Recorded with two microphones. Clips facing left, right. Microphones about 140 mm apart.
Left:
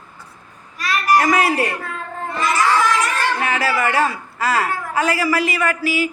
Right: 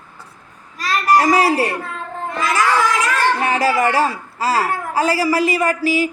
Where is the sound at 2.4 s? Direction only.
90° right.